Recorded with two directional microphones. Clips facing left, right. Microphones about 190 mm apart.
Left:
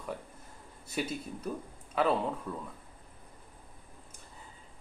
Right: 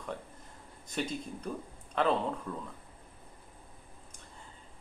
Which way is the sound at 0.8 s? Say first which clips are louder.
Even; 5° left (ahead or behind).